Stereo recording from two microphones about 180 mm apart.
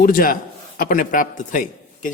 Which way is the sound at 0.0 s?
50° left (ahead or behind).